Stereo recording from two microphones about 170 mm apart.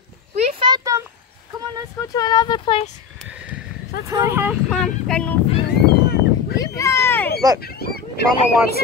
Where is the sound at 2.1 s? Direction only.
25° left (ahead or behind).